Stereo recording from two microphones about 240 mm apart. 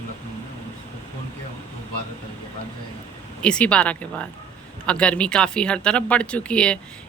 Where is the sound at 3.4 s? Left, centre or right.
Centre.